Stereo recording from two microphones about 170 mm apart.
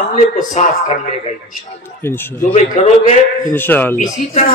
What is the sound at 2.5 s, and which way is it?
Speech, 40° left (ahead or behind).